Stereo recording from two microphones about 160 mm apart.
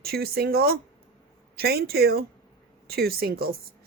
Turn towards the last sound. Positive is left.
turn(degrees=-70)  # may be behind; listen again after turning